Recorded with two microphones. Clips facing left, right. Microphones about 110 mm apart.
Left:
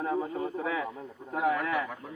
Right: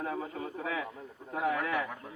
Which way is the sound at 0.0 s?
30° left (ahead or behind).